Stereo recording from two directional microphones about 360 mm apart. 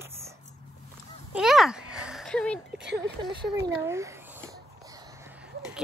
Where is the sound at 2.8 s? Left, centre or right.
Right.